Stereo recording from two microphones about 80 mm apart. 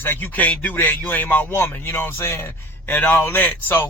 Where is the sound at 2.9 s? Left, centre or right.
Left.